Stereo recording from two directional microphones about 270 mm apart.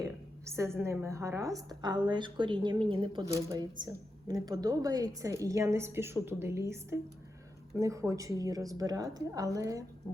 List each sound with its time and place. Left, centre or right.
0.0 s a woman's voice: centre